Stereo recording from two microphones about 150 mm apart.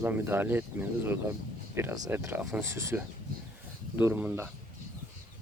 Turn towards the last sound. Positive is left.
turn(degrees=-10)  # may be behind; listen again after turning